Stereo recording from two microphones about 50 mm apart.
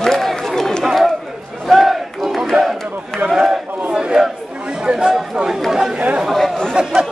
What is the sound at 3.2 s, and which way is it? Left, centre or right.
Speech, centre.